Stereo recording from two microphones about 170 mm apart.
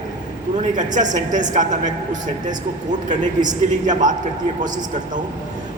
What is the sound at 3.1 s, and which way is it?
A man's voice, 45° right (ahead or behind).